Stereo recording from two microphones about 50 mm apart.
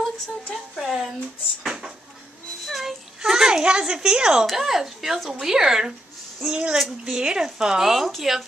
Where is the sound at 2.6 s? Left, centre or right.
Centre.